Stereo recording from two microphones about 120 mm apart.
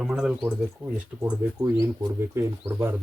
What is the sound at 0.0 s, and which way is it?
Speech, 5° right (ahead or behind).